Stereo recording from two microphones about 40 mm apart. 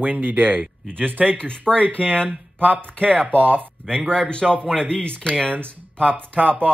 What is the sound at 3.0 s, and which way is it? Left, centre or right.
Speech, right.